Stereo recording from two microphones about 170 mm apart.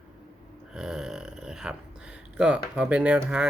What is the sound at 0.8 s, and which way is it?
A man's voice, 5° right (ahead or behind).